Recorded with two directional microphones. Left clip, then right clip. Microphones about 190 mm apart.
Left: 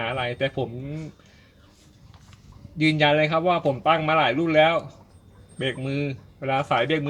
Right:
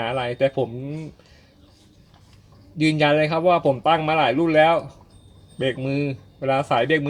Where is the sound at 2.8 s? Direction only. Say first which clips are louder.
Right 1 dB; 30° right (ahead or behind).